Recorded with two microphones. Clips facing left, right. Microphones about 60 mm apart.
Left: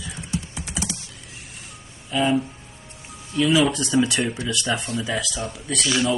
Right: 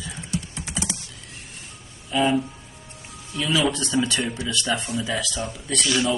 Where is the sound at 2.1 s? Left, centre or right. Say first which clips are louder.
Even; centre.